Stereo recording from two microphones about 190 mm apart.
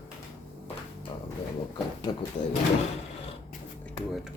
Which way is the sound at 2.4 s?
45° left (ahead or behind).